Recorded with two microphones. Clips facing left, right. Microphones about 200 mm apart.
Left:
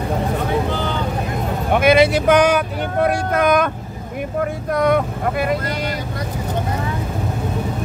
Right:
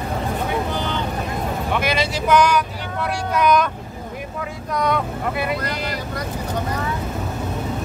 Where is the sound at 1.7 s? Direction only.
55° left (ahead or behind).